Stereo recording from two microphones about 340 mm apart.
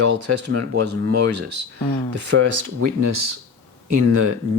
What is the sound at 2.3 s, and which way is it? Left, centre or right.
Speech, right.